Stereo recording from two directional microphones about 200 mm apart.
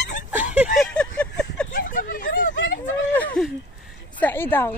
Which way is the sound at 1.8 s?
45° left (ahead or behind).